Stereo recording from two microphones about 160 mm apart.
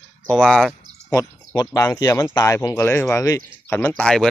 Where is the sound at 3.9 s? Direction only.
5° left (ahead or behind).